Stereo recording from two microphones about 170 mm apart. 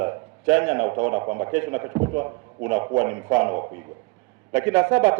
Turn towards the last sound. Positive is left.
turn(degrees=-10)  # may be behind; listen again after turning